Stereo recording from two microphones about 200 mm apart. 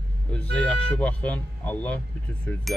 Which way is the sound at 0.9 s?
5° left (ahead or behind).